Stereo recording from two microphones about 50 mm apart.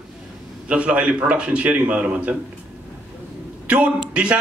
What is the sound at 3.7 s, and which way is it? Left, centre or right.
Speech, right.